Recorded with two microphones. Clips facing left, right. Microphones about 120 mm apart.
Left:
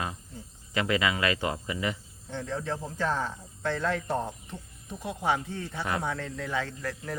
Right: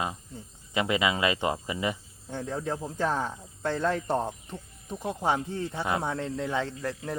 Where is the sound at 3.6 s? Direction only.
35° right (ahead or behind).